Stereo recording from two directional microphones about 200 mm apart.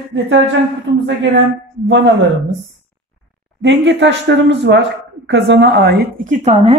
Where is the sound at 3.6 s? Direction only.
65° right (ahead or behind).